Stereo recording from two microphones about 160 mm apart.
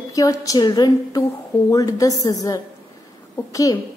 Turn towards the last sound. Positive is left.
turn(degrees=20)  # may be behind; listen again after turning